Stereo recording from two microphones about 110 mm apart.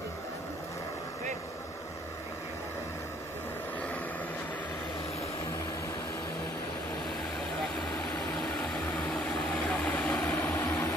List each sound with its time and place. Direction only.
8.8 s vehicle: 5° left (ahead or behind)
10.5 s vehicle: 20° left (ahead or behind)